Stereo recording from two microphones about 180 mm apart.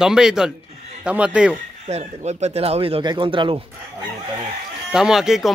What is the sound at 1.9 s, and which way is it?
Speech, 35° right (ahead or behind).